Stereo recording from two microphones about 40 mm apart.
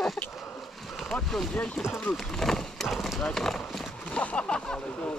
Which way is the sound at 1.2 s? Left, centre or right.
Centre.